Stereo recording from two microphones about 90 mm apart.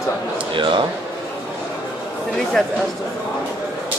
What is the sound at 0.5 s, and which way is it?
Speech, 65° right (ahead or behind).